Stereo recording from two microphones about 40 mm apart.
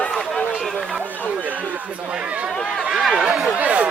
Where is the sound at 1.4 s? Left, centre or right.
Right.